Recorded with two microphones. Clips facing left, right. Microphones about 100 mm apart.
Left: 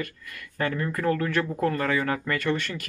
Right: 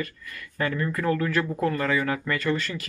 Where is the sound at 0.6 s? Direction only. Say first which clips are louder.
Even; 40° left (ahead or behind).